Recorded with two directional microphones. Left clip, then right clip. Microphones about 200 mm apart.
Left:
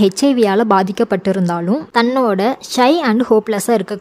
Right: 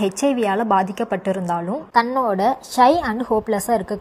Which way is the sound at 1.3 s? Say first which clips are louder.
Left 5 dB; 25° left (ahead or behind).